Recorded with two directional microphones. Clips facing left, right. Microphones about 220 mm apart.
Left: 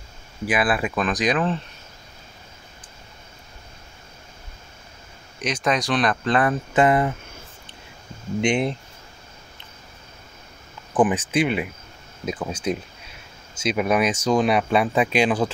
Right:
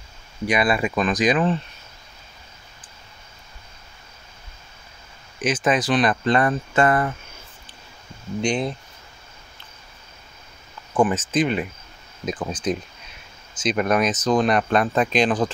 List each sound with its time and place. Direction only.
0.5 s speech: 5° left (ahead or behind)
5.4 s speech: 5° right (ahead or behind)
6.7 s speech: 20° left (ahead or behind)
8.4 s speech: 25° left (ahead or behind)
10.9 s speech: 15° left (ahead or behind)